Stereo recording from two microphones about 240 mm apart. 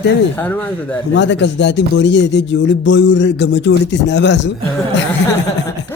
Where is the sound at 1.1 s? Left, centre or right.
Left.